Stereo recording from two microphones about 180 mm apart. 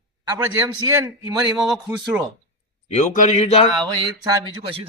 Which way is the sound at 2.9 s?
40° left (ahead or behind).